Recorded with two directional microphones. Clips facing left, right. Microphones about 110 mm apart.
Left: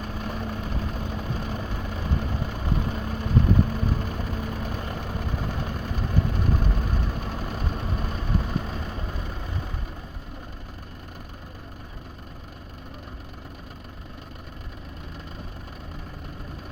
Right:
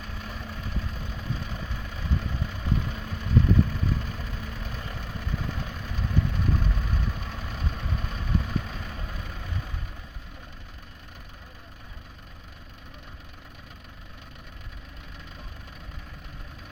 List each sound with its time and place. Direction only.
0.0 s vehicle: 45° left (ahead or behind)